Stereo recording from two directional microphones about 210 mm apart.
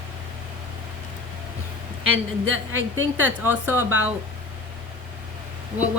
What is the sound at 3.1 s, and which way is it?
Speech, 10° right (ahead or behind).